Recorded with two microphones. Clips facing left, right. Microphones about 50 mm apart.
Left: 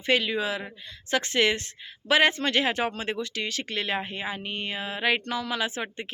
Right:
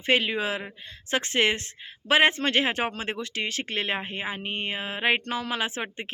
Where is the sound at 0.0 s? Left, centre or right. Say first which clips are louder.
Right 1 dB; right.